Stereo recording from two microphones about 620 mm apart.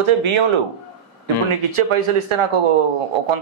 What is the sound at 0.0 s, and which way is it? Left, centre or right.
Speech, right.